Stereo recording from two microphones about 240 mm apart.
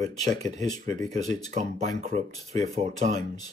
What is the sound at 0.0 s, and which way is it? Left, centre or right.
Speech, right.